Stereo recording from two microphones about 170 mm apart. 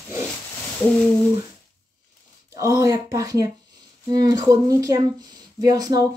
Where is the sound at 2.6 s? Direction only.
20° right (ahead or behind).